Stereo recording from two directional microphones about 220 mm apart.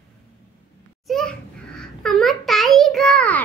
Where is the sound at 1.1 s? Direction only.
5° left (ahead or behind).